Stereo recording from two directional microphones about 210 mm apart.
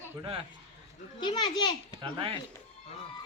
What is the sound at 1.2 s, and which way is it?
Speech, 20° left (ahead or behind).